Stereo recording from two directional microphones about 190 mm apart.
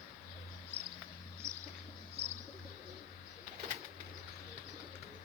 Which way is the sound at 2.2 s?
35° right (ahead or behind).